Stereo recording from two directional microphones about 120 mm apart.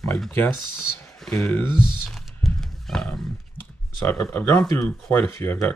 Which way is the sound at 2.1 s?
Centre (ahead or behind).